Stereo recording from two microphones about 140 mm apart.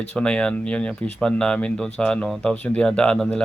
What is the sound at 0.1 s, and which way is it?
Speech, 5° left (ahead or behind).